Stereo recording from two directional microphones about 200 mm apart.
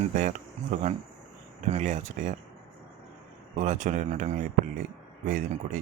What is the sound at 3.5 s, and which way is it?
Speech, 35° right (ahead or behind).